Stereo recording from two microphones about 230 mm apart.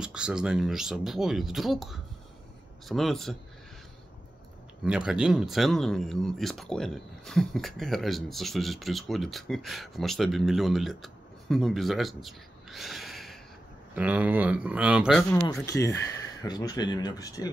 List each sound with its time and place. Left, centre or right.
0.0 s speech: centre
4.8 s speech: centre
15.6 s speech: centre